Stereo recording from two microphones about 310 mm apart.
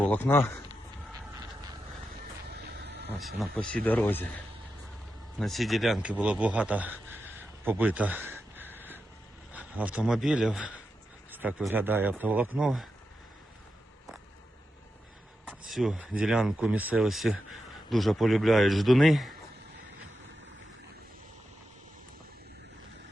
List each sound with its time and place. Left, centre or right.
0.0 s speech: centre
3.2 s a man's voice: centre
5.4 s a man's voice: centre
15.7 s a man's voice: centre